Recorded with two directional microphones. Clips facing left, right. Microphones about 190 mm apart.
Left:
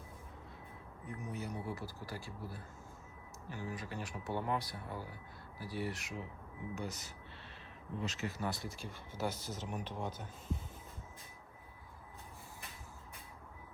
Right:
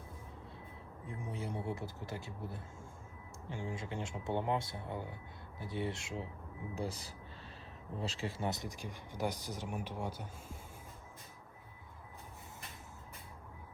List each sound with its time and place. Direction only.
1.0 s speech: 30° right (ahead or behind); by 10.6 s 10° right (ahead or behind)